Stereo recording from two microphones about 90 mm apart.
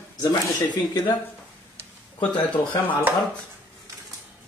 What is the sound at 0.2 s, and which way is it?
Speech, 55° left (ahead or behind).